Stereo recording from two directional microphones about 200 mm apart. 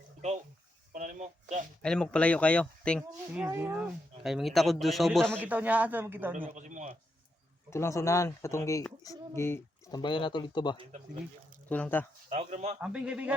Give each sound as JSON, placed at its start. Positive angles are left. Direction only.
{"t": 0.9, "sound": "a sound", "side_deg": -35}
{"t": 1.8, "sound": "speech", "side_deg": 5}
{"t": 3.3, "sound": "speech", "side_deg": -10}
{"t": 5.4, "sound": "speech", "side_deg": -10}
{"t": 6.5, "sound": "a man's voice", "side_deg": -40}
{"t": 7.7, "sound": "speech", "side_deg": 15}
{"t": 10.0, "sound": "speech", "side_deg": 25}
{"t": 11.7, "sound": "speech", "side_deg": 10}
{"t": 12.3, "sound": "a man's voice", "side_deg": -35}
{"t": 12.8, "sound": "speech", "side_deg": -5}